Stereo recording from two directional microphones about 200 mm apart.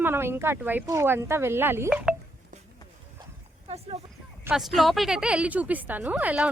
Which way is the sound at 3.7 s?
30° right (ahead or behind).